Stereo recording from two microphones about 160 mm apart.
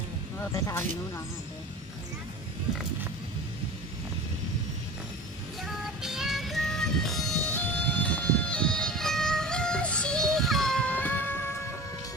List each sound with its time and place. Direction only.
0.7 s speech: 15° left (ahead or behind)
5.6 s music: 5° right (ahead or behind)